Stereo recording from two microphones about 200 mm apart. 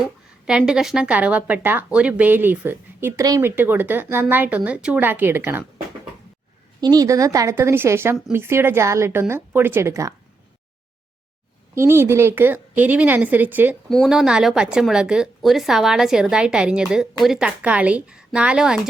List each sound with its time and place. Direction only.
0.0 s a woman's voice: 5° right (ahead or behind)
6.8 s a woman's voice: 20° right (ahead or behind)
11.7 s a woman's voice: 15° right (ahead or behind)